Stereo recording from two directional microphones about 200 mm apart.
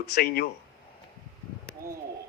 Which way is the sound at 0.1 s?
50° left (ahead or behind).